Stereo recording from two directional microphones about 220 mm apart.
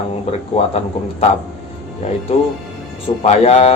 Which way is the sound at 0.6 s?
30° left (ahead or behind).